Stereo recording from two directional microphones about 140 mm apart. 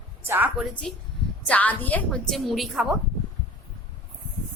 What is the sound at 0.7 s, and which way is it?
A woman's voice, 10° left (ahead or behind).